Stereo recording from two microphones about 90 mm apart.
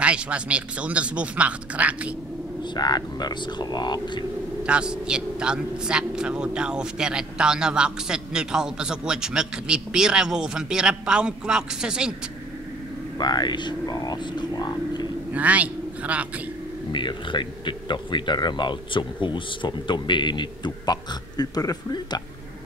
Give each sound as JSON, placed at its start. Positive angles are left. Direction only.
{"t": 0.0, "sound": "a man's voice", "side_deg": -15}
{"t": 2.6, "sound": "speech", "side_deg": 50}
{"t": 4.6, "sound": "a man's voice", "side_deg": -10}
{"t": 13.2, "sound": "speech", "side_deg": 50}
{"t": 15.3, "sound": "a man's voice", "side_deg": -15}
{"t": 16.9, "sound": "speech", "side_deg": 60}